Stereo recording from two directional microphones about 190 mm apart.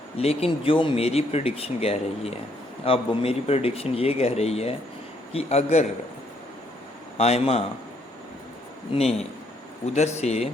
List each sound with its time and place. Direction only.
0.2 s speech: 30° left (ahead or behind)
7.2 s speech: 35° left (ahead or behind)
8.9 s speech: 35° left (ahead or behind)